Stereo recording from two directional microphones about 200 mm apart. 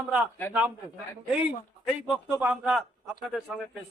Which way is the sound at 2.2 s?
5° right (ahead or behind).